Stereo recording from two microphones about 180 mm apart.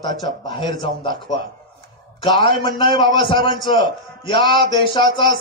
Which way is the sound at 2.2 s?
25° left (ahead or behind).